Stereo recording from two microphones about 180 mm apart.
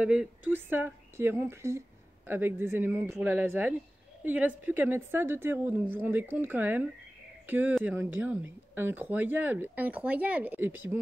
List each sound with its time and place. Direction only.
0.0 s speech: 5° right (ahead or behind)